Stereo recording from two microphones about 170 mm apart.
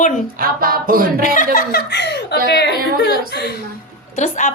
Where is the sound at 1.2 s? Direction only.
55° left (ahead or behind); by 3.5 s 75° left (ahead or behind).